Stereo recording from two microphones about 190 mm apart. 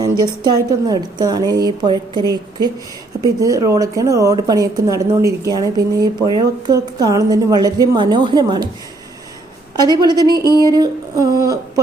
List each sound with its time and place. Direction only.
0.0 s speech: 20° right (ahead or behind)
9.7 s speech: 20° right (ahead or behind)
10.4 s a sound: 20° left (ahead or behind)
10.7 s speech: 20° right (ahead or behind)